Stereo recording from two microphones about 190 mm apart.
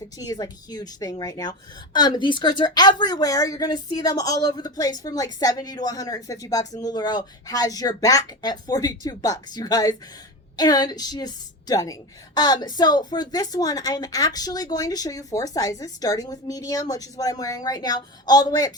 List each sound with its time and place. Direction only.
0.2 s a woman's voice: 20° left (ahead or behind)